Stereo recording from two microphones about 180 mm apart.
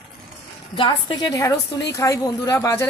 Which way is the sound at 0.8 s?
25° left (ahead or behind).